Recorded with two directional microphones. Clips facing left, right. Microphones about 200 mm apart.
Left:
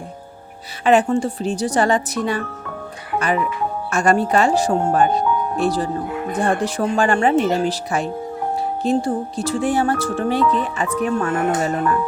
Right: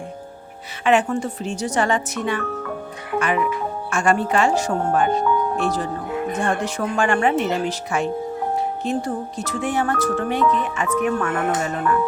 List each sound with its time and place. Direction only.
0.9 s speech: 35° left (ahead or behind)